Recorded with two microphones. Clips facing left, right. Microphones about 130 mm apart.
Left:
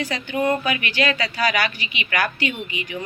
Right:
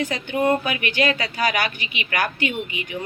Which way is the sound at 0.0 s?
50° right (ahead or behind).